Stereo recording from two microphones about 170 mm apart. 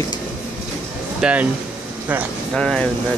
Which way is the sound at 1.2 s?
10° right (ahead or behind).